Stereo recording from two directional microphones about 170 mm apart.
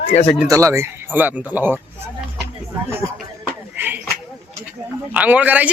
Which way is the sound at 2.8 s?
15° right (ahead or behind).